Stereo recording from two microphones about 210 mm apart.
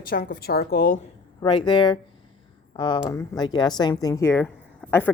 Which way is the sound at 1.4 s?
20° left (ahead or behind).